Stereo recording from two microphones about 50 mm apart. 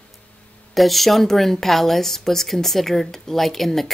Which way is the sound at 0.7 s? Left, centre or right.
Centre.